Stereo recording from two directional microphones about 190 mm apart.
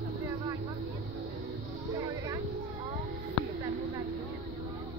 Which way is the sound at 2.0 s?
20° right (ahead or behind).